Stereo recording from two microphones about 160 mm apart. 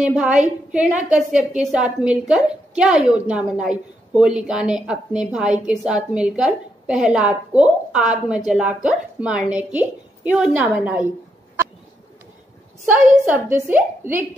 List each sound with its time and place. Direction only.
0.0 s a woman's voice: 5° right (ahead or behind)
13.3 s a woman's voice: 10° right (ahead or behind)